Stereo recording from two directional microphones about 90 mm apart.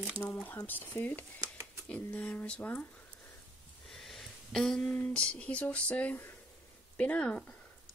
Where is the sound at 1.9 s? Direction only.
15° left (ahead or behind).